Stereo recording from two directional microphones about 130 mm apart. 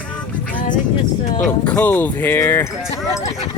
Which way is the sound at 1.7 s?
15° left (ahead or behind).